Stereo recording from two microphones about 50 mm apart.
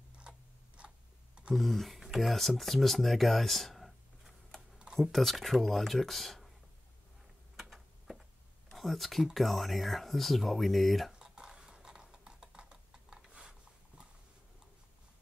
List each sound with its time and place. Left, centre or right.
0.2 s a sound: right
1.5 s speech: centre
4.6 s computer keyboard: right
4.9 s speech: centre
8.7 s speech: centre
11.1 s computer keyboard: centre